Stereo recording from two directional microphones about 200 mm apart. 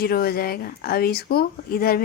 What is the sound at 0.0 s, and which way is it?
A woman's voice, 50° left (ahead or behind).